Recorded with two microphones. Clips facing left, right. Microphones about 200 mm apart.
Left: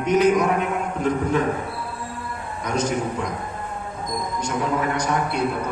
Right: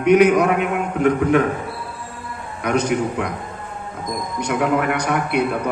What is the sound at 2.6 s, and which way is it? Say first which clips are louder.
Speech: right 4 dB; 65° right (ahead or behind).